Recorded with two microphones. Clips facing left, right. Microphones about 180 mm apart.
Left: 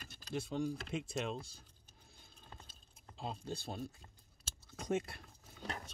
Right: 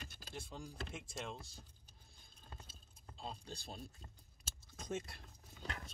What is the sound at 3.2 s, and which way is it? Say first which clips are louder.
Speech: left 6 dB; 65° left (ahead or behind).